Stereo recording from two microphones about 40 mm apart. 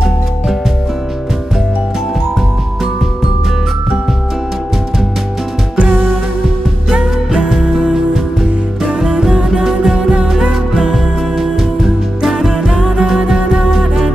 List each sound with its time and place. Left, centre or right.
5.8 s music: right
6.9 s music: centre
7.8 s music: centre
11.3 s music: centre
13.7 s music: centre